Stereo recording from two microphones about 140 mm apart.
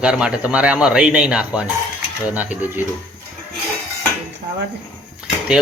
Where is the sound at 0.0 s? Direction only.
5° right (ahead or behind).